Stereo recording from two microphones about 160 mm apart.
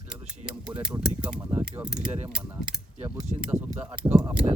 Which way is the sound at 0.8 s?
5° right (ahead or behind).